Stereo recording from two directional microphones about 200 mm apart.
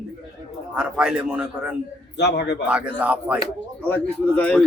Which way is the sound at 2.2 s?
55° left (ahead or behind).